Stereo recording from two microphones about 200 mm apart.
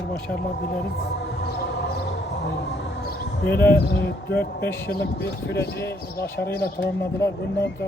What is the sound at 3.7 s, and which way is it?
Speech, 55° left (ahead or behind).